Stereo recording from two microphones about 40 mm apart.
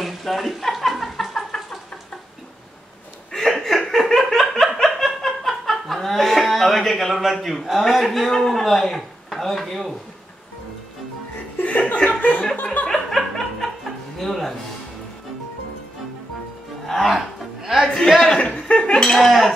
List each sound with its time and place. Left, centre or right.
0.0 s a sound: centre
3.3 s chuckle: centre
3.9 s laughter: centre
11.6 s chuckle: left
12.8 s laughter: centre
14.2 s music: centre
16.8 s music: centre
17.8 s a sound: centre
18.4 s a sound: left
19.1 s speech: centre